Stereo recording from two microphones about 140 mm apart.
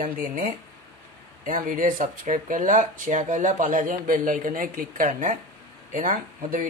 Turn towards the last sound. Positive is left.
turn(degrees=-75)  # may be behind; listen again after turning